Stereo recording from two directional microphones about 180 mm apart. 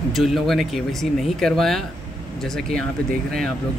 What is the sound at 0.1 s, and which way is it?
Speech, centre (ahead or behind).